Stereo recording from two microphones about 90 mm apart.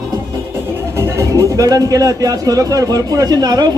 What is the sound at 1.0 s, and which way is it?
Speech, 35° right (ahead or behind).